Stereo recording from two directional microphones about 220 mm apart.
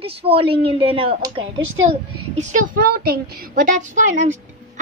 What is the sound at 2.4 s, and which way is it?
A woman's voice, 35° right (ahead or behind).